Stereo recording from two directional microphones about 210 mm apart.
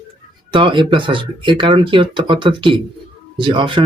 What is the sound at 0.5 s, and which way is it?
Speech, 25° right (ahead or behind).